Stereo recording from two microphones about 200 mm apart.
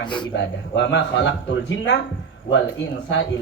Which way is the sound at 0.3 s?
65° left (ahead or behind).